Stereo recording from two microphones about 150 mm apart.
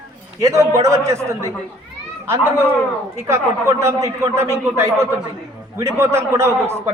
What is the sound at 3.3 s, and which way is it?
A man's voice, 20° right (ahead or behind).